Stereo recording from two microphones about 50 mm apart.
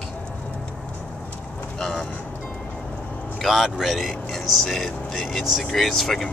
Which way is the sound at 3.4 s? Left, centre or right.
Centre.